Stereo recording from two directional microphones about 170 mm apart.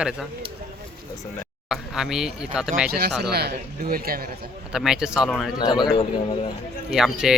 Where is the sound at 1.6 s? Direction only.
5° right (ahead or behind).